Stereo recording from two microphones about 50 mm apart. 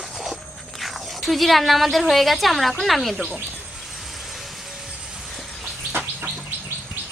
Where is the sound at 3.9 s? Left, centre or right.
Centre.